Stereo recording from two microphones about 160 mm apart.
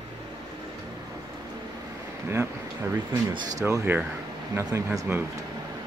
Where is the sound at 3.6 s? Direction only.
20° right (ahead or behind).